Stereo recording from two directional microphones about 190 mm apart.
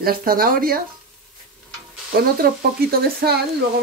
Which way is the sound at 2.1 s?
50° right (ahead or behind).